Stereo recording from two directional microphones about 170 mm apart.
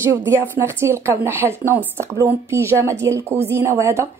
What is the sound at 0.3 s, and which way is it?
Speech, 15° right (ahead or behind).